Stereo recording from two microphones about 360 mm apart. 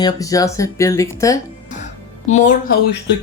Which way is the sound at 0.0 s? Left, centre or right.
Centre.